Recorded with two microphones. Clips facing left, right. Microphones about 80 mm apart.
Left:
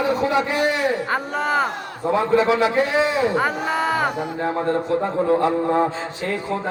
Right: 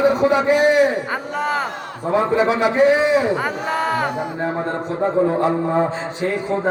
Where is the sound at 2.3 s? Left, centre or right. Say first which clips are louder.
Left 3 dB; centre.